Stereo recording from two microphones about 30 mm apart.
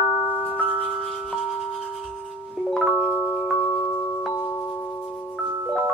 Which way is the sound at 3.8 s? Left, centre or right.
Left.